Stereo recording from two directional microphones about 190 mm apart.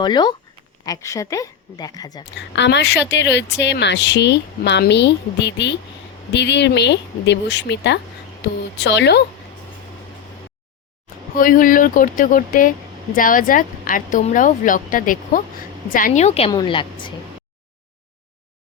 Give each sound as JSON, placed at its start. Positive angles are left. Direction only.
{"t": 0.0, "sound": "a woman's voice", "side_deg": 25}
{"t": 2.6, "sound": "a woman's voice", "side_deg": 65}
{"t": 11.3, "sound": "a woman's voice", "side_deg": 45}
{"t": 16.5, "sound": "a woman's voice", "side_deg": 25}